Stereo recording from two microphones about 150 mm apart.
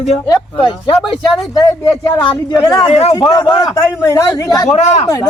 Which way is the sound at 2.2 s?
35° left (ahead or behind).